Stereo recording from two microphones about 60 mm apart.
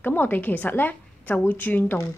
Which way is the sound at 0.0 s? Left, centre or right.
Left.